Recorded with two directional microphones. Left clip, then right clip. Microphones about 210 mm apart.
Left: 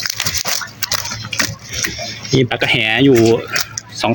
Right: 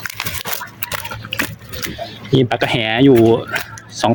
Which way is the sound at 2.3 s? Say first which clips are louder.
Left 1 dB; 5° right (ahead or behind).